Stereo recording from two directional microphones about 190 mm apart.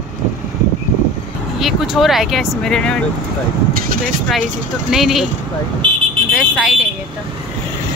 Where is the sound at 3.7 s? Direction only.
45° right (ahead or behind).